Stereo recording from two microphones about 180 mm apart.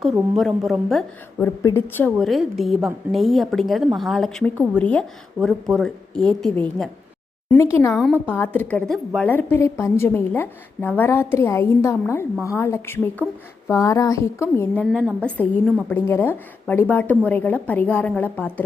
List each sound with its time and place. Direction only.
0.0 s a woman's voice: centre (ahead or behind)
1.4 s a woman's voice: 15° left (ahead or behind)
7.5 s a woman's voice: 15° left (ahead or behind)